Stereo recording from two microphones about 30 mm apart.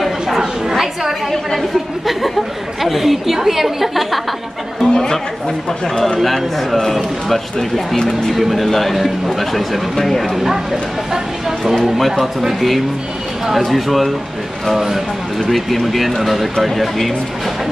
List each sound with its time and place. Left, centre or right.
0.4 s chatter: centre
2.8 s a woman's voice: centre
4.8 s chatter: centre
6.2 s speech: centre
8.4 s speech: centre
10.3 s speech: centre
11.8 s speech: centre
15.5 s speech: centre